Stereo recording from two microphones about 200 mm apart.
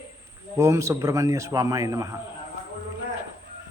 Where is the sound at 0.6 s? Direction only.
15° right (ahead or behind).